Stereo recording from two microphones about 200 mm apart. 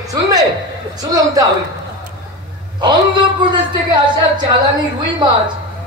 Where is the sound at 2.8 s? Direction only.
20° right (ahead or behind).